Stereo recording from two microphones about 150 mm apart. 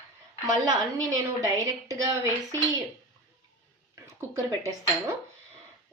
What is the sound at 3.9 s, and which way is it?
Speech, 20° right (ahead or behind).